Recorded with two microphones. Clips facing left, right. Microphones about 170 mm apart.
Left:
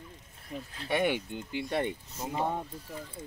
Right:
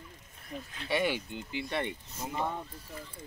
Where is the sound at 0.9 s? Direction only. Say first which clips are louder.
Left 2 dB; 55° left (ahead or behind).